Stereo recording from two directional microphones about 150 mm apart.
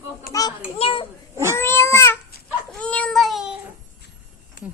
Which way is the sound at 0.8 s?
35° left (ahead or behind).